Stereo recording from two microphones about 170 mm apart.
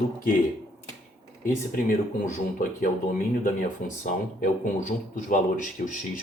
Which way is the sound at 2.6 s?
55° left (ahead or behind).